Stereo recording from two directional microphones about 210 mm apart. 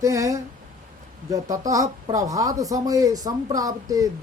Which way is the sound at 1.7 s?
15° right (ahead or behind).